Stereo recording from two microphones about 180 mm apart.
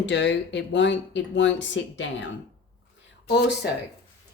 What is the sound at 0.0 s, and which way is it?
Speech, 75° left (ahead or behind).